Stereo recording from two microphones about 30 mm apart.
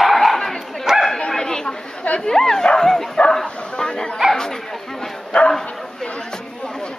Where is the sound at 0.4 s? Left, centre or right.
Centre.